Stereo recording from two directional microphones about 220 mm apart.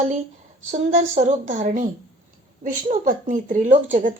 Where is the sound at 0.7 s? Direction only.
35° right (ahead or behind).